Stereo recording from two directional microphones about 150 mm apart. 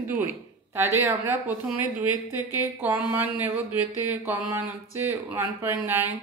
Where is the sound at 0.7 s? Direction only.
20° right (ahead or behind).